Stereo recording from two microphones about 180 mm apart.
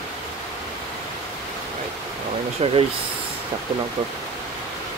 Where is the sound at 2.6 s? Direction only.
35° right (ahead or behind).